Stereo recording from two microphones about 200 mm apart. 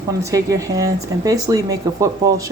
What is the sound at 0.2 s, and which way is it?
A woman's voice, 15° right (ahead or behind).